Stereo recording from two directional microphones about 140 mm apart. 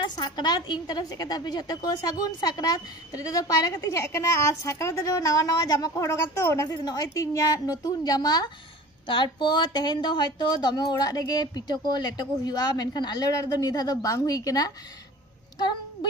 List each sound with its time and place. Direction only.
0.0 s a woman's voice: 30° left (ahead or behind)